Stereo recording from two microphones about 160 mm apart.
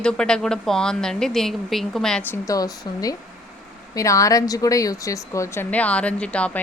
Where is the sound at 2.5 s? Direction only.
25° left (ahead or behind).